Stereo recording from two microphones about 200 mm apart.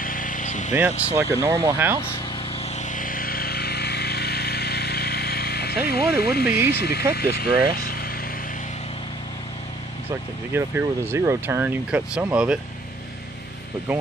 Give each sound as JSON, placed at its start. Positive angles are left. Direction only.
{"t": 0.0, "sound": "vehicle", "side_deg": 45}
{"t": 0.7, "sound": "speech", "side_deg": -10}
{"t": 2.7, "sound": "vehicle", "side_deg": 40}
{"t": 7.2, "sound": "speech", "side_deg": 50}
{"t": 7.7, "sound": "vehicle", "side_deg": 50}
{"t": 10.5, "sound": "speech", "side_deg": -10}